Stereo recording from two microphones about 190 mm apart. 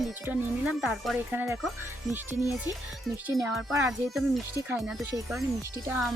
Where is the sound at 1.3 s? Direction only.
10° right (ahead or behind).